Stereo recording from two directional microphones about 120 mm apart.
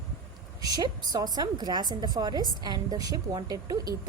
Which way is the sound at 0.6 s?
35° right (ahead or behind).